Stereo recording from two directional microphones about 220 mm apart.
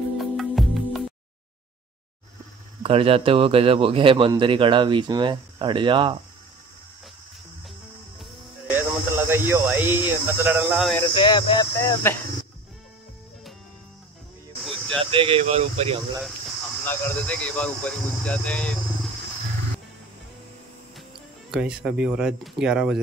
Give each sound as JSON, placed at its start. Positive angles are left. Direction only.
{"t": 0.2, "sound": "music", "side_deg": 0}
{"t": 2.8, "sound": "speech", "side_deg": -25}
{"t": 8.2, "sound": "music", "side_deg": -10}
{"t": 11.1, "sound": "speech", "side_deg": 20}
{"t": 14.6, "sound": "a sound", "side_deg": 0}
{"t": 15.0, "sound": "speech", "side_deg": -25}
{"t": 16.8, "sound": "speech", "side_deg": 10}
{"t": 21.5, "sound": "speech", "side_deg": -5}